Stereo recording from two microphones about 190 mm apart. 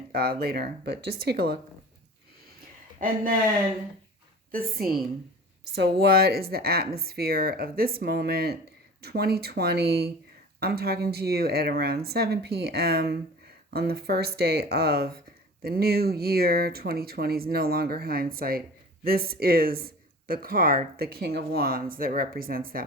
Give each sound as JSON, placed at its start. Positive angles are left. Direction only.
{"t": 0.1, "sound": "speech", "side_deg": -55}
{"t": 3.0, "sound": "speech", "side_deg": -45}
{"t": 4.8, "sound": "speech", "side_deg": -50}